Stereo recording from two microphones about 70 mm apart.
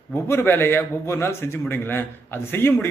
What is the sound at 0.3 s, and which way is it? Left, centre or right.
A man's voice, left.